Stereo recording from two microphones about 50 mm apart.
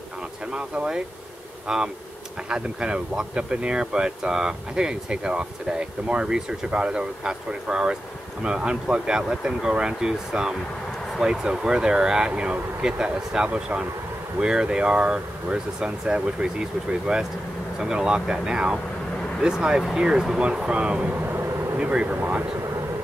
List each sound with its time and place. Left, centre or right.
0.5 s speech: centre
21.1 s vehicle: right
21.7 s speech: right